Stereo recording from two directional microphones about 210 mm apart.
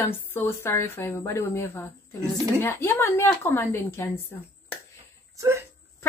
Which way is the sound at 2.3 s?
15° right (ahead or behind).